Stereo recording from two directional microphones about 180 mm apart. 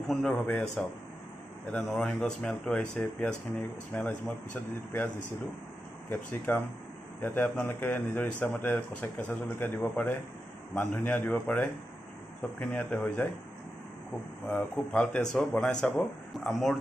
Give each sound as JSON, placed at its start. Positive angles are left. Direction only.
{"t": 0.1, "sound": "speech", "side_deg": 5}
{"t": 6.0, "sound": "speech", "side_deg": 10}
{"t": 14.5, "sound": "speech", "side_deg": 10}